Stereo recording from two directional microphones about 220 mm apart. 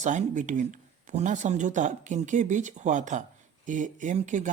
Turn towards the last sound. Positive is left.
turn(degrees=-35)  # may be behind; listen again after turning